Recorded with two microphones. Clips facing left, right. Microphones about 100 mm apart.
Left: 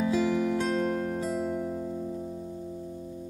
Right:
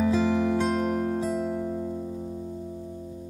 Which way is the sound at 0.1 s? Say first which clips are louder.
Right 2 dB; 30° right (ahead or behind).